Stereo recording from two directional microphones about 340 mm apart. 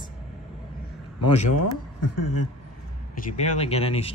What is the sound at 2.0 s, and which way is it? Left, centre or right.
Speech, left.